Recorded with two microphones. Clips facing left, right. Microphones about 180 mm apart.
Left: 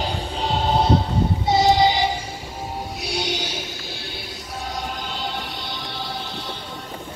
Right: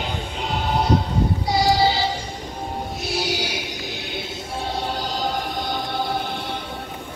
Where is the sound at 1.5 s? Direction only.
20° left (ahead or behind).